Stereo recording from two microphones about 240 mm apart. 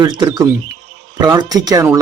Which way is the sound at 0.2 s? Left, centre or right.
Centre.